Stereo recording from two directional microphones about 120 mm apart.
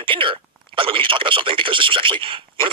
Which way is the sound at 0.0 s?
45° right (ahead or behind).